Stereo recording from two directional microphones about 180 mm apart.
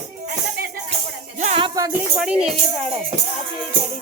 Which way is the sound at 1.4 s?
35° right (ahead or behind).